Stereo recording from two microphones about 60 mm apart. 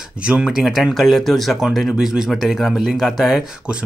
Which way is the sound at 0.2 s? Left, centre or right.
Centre.